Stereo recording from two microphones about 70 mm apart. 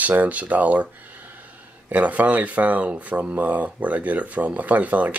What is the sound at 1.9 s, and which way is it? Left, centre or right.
Speech, right.